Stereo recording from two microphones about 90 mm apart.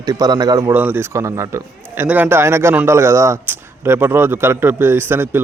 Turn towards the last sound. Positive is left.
turn(degrees=-25)  # may be behind; listen again after turning